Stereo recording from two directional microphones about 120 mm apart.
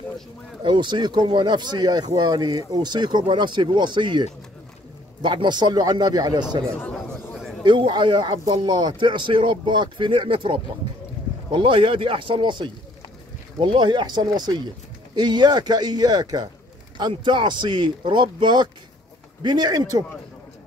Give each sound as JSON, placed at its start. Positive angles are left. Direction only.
{"t": 0.7, "sound": "speech", "side_deg": -40}
{"t": 6.7, "sound": "speech", "side_deg": 10}
{"t": 7.6, "sound": "speech", "side_deg": -40}